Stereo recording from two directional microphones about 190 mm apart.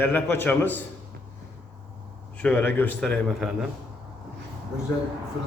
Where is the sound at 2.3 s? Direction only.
5° left (ahead or behind).